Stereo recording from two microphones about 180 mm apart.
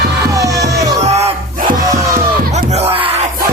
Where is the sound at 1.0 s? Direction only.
35° right (ahead or behind).